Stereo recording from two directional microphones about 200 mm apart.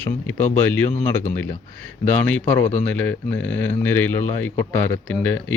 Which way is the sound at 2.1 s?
5° left (ahead or behind).